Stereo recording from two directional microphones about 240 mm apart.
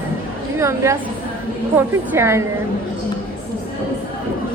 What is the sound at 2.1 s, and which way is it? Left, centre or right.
Speech, centre.